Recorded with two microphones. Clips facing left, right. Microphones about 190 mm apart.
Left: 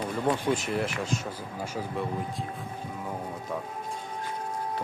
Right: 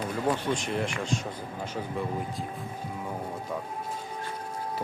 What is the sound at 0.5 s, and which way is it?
Speech, 5° left (ahead or behind).